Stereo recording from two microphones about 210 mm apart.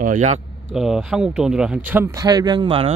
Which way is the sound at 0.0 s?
35° right (ahead or behind).